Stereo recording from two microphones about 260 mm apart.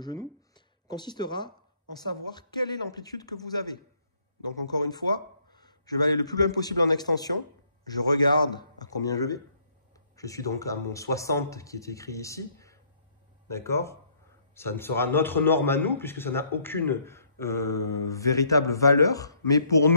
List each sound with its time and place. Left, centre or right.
0.0 s a man's voice: centre